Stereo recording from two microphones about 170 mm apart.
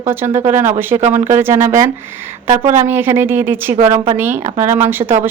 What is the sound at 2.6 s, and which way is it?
Speech, 50° right (ahead or behind).